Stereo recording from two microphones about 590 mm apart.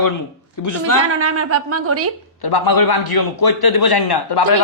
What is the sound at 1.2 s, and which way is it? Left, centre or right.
Speech, right.